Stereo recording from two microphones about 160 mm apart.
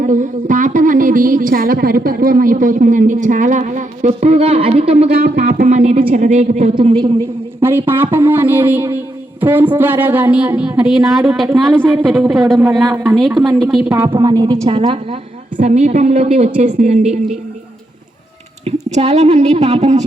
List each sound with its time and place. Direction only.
0.0 s speech: 55° right (ahead or behind)
5.1 s speech: 70° right (ahead or behind); by 6.7 s 45° right (ahead or behind)
6.7 s a man's voice: 30° right (ahead or behind)
7.6 s a woman's voice: 15° right (ahead or behind)
13.8 s speech: 15° right (ahead or behind)
14.1 s a woman's voice: 25° right (ahead or behind)
15.5 s speech: 45° right (ahead or behind)
18.6 s speech: 40° right (ahead or behind)